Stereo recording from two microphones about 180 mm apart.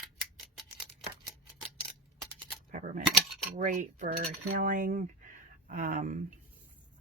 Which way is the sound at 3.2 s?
Centre (ahead or behind).